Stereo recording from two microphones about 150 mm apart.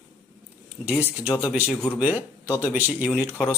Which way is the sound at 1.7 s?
5° left (ahead or behind).